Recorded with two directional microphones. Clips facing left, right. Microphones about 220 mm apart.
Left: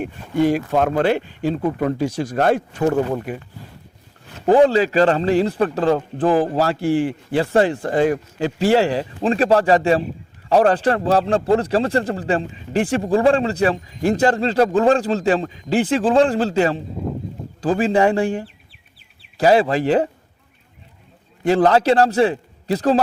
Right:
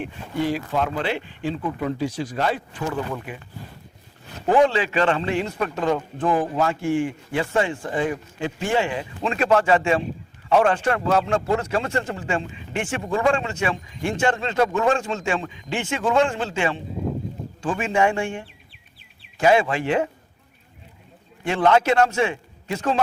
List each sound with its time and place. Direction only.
0.0 s speech: 45° left (ahead or behind)
4.4 s a man's voice: 35° left (ahead or behind)
21.4 s a man's voice: 35° left (ahead or behind)